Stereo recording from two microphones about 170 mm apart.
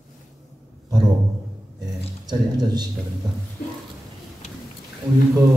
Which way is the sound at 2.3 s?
25° right (ahead or behind).